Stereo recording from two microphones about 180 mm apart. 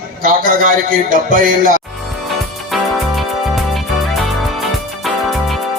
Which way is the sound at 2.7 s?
Centre (ahead or behind).